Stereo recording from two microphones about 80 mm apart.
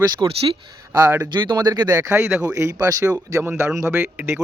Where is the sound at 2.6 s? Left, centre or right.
Right.